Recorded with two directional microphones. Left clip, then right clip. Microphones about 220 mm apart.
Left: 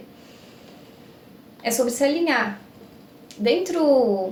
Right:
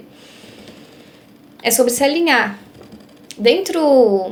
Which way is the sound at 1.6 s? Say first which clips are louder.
Right 6 dB; 40° right (ahead or behind).